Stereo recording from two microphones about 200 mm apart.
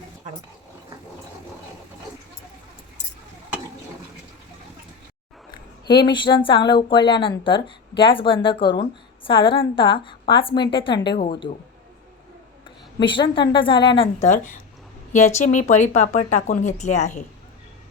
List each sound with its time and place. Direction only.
5.5 s speech: 20° left (ahead or behind)
13.0 s speech: 25° left (ahead or behind)